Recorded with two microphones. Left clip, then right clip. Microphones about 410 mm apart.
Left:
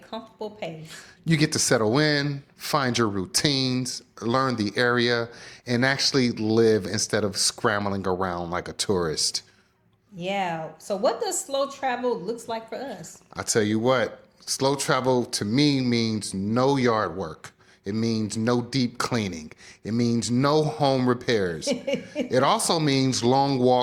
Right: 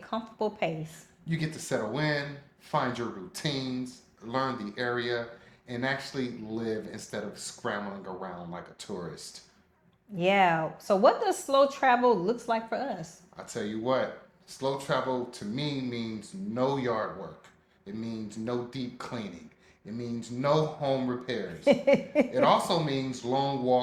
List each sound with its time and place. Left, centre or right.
0.1 s speech: centre
1.2 s speech: left
10.2 s speech: centre
13.3 s speech: left
21.7 s speech: centre
22.3 s speech: left